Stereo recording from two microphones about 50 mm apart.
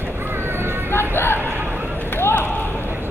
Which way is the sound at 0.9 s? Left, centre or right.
Left.